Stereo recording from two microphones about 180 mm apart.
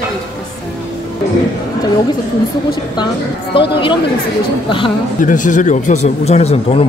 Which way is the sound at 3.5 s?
30° left (ahead or behind).